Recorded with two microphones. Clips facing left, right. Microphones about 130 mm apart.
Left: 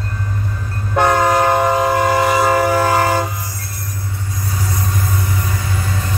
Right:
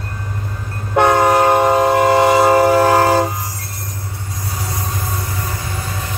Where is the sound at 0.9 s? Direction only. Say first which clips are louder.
Right 2 dB; 20° right (ahead or behind).